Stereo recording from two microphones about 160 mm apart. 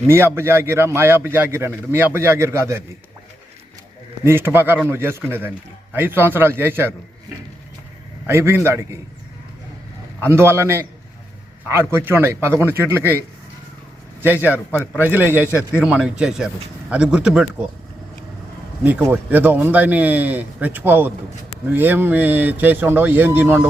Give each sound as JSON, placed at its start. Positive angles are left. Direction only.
{"t": 0.1, "sound": "a man's voice", "side_deg": -15}
{"t": 4.2, "sound": "a man's voice", "side_deg": -15}
{"t": 8.3, "sound": "a man's voice", "side_deg": -15}
{"t": 10.2, "sound": "a man's voice", "side_deg": -15}
{"t": 14.4, "sound": "a man's voice", "side_deg": -10}
{"t": 18.8, "sound": "a man's voice", "side_deg": -10}